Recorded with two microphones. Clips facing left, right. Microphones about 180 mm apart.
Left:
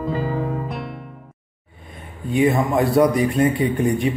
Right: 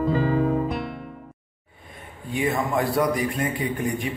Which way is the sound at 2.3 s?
20° left (ahead or behind).